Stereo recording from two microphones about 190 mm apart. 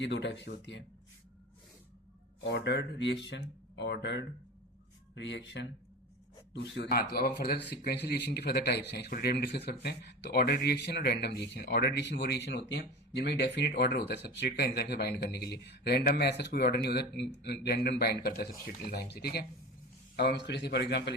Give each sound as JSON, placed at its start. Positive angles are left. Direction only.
{"t": 0.0, "sound": "speech", "side_deg": 65}
{"t": 2.4, "sound": "speech", "side_deg": 65}